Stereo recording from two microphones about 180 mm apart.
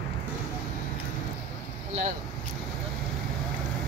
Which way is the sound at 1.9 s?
40° right (ahead or behind).